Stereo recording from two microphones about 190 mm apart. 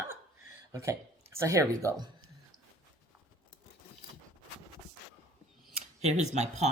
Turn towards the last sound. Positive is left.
turn(degrees=-35)  # may be behind; listen again after turning